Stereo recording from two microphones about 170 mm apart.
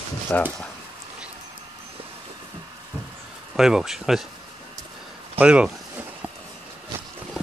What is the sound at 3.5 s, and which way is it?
Speech, 5° right (ahead or behind).